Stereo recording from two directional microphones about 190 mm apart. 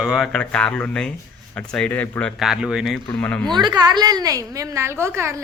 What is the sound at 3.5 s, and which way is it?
A woman's voice, 20° right (ahead or behind).